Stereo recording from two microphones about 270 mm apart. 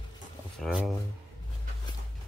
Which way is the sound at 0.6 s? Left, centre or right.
Centre.